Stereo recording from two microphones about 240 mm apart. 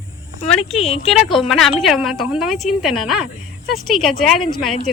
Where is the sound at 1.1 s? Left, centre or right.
Centre.